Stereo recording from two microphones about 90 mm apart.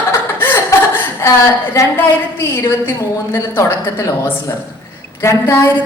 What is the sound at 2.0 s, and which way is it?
A woman's voice, 30° left (ahead or behind).